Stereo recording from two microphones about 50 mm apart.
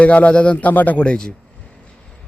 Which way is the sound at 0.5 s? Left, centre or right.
Left.